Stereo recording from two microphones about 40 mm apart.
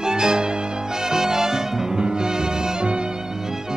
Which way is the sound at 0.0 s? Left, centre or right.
Centre.